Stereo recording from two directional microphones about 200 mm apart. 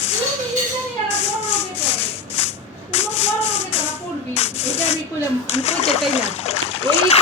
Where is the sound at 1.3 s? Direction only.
10° left (ahead or behind).